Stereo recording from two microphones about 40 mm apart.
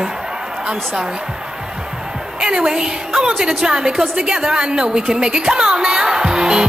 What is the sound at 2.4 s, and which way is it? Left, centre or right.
A woman's voice, centre.